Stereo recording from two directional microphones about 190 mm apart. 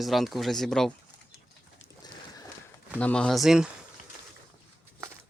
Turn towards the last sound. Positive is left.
turn(degrees=0)  # may be behind; listen again after turning